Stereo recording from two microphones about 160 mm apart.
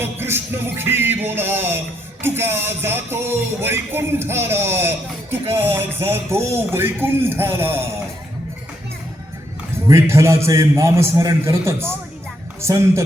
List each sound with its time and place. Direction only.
0.0 s music: 15° right (ahead or behind)
9.7 s music: 20° right (ahead or behind)